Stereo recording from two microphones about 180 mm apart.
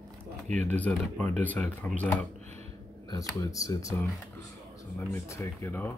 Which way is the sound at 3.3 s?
20° left (ahead or behind).